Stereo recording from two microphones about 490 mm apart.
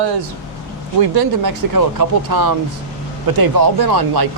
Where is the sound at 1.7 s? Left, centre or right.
Right.